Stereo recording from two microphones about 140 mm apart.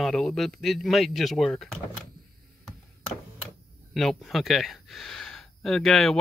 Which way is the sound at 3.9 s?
Centre (ahead or behind).